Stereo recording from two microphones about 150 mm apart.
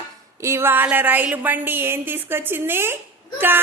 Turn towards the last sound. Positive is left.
turn(degrees=-15)  # may be behind; listen again after turning